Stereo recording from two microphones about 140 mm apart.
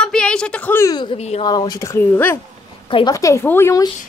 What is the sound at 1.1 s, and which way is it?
Speech, 50° left (ahead or behind).